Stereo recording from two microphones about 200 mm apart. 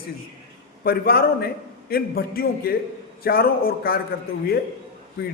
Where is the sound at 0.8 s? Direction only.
50° left (ahead or behind).